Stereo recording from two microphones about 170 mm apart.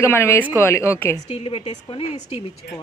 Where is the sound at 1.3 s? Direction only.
35° left (ahead or behind).